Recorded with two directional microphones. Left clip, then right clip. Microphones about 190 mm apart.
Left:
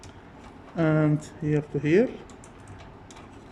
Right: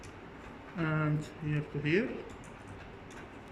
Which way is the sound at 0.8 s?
40° left (ahead or behind).